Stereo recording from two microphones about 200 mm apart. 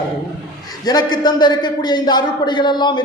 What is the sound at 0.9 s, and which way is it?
A man's voice, 20° left (ahead or behind).